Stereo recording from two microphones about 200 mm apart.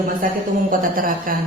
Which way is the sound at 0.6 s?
45° right (ahead or behind).